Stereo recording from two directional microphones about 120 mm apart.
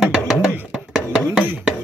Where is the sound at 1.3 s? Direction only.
10° right (ahead or behind).